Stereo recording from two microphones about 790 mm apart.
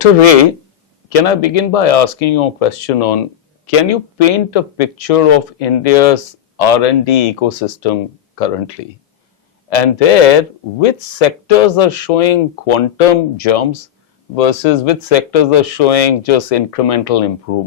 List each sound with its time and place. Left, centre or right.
0.0 s speech: left